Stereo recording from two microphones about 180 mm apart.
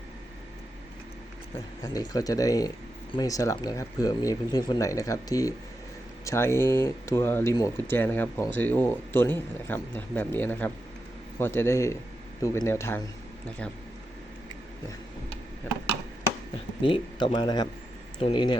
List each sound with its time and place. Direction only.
1.8 s speech: 20° left (ahead or behind)
16.8 s speech: 30° left (ahead or behind)